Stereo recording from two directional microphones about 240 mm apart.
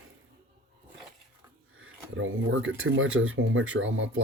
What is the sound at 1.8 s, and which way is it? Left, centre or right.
Speech, right.